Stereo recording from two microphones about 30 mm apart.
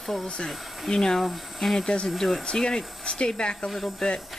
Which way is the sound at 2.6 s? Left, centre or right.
Left.